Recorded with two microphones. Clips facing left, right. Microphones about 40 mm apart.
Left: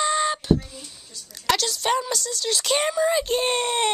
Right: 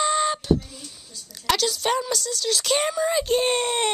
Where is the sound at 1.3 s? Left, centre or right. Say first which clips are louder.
Even; centre.